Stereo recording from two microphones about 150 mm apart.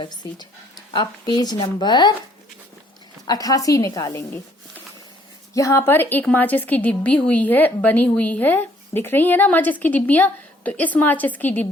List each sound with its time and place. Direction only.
0.0 s a woman's voice: 30° left (ahead or behind)
3.2 s a woman's voice: 25° left (ahead or behind)
5.5 s a woman's voice: 20° left (ahead or behind)